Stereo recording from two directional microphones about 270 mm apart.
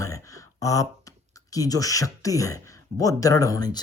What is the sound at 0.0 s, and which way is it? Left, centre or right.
Speech, centre.